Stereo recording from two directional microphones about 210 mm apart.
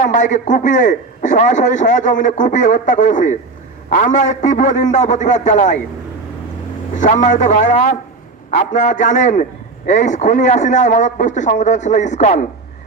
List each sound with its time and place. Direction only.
0.0 s a man's voice: 35° left (ahead or behind)
6.9 s a man's voice: 35° left (ahead or behind)